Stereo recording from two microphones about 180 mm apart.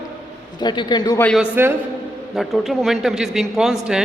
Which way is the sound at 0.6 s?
25° left (ahead or behind).